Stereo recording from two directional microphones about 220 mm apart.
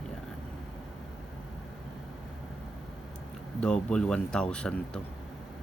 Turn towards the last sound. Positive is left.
turn(degrees=5)  # may be behind; listen again after turning